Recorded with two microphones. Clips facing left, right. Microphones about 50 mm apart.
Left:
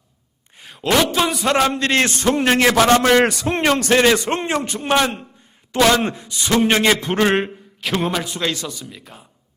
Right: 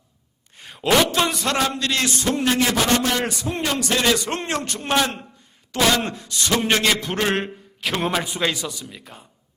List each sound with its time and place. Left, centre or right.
0.5 s a man's voice: centre
1.7 s a man's voice: left
2.6 s a man's voice: left
4.0 s a man's voice: left
4.4 s a man's voice: centre
7.8 s a man's voice: centre